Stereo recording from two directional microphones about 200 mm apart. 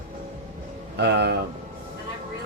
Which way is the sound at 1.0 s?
55° right (ahead or behind).